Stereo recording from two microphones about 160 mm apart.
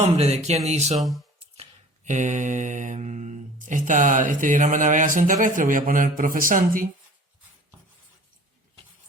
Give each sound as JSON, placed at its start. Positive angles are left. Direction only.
{"t": 0.0, "sound": "speech", "side_deg": -40}
{"t": 0.9, "sound": "speech", "side_deg": 0}
{"t": 2.0, "sound": "speech", "side_deg": -50}